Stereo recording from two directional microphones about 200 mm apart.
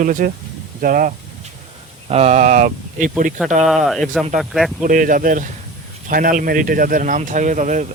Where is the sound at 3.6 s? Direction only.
Centre (ahead or behind).